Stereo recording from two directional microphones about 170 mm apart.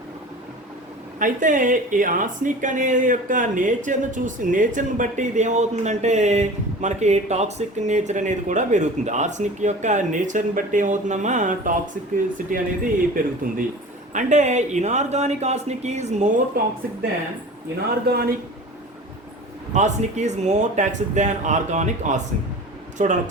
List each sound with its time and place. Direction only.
1.2 s speech: 50° right (ahead or behind)
16.6 s speech: 60° right (ahead or behind)
18.1 s speech: 65° right (ahead or behind)
19.7 s speech: 45° right (ahead or behind)